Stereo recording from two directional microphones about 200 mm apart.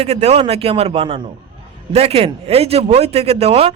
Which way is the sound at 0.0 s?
30° right (ahead or behind).